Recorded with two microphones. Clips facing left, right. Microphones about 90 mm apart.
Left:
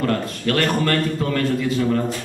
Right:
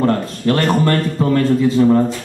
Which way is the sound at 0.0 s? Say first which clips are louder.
Right 5 dB; 25° right (ahead or behind).